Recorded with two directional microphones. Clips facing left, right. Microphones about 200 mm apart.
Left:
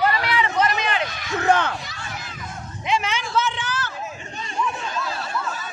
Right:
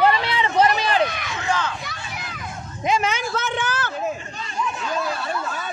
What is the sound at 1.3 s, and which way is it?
Speech, 60° left (ahead or behind).